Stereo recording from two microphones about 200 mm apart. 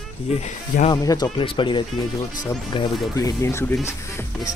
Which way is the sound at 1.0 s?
20° left (ahead or behind).